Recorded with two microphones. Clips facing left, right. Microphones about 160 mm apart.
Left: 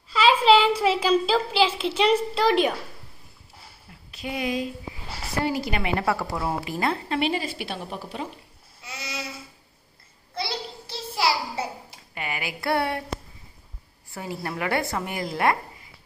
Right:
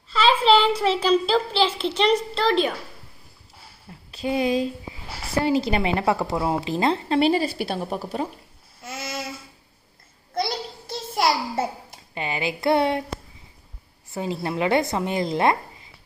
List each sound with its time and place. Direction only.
0.1 s a woman's voice: 10° left (ahead or behind)
4.1 s a woman's voice: 30° right (ahead or behind)
7.2 s a woman's voice: 35° right (ahead or behind)
8.8 s child singing: 50° right (ahead or behind)
10.3 s a sound: 45° right (ahead or behind)
12.1 s a woman's voice: 25° right (ahead or behind)
14.1 s a woman's voice: 20° right (ahead or behind)